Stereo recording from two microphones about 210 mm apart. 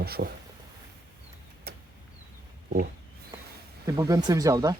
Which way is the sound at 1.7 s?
45° right (ahead or behind).